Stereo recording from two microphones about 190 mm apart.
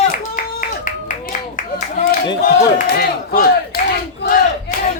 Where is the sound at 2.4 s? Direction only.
50° left (ahead or behind).